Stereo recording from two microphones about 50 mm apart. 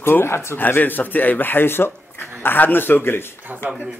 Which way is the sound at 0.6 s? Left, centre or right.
Left.